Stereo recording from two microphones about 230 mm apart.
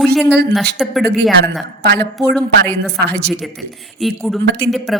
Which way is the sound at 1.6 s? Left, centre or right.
Right.